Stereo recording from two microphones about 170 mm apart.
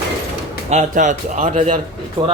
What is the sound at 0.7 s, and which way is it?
Speech, 45° right (ahead or behind).